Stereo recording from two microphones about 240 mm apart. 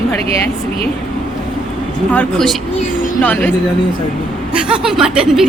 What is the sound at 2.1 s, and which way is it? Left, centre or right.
A woman's voice, centre.